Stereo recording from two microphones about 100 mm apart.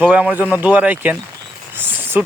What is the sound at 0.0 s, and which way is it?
Speech, 15° right (ahead or behind).